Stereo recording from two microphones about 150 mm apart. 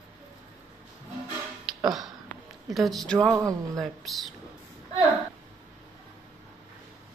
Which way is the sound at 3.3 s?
25° right (ahead or behind).